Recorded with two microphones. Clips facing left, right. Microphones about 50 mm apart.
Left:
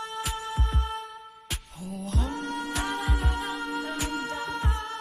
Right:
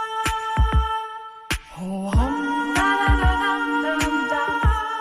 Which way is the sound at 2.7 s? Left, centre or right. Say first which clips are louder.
Right 13 dB; right.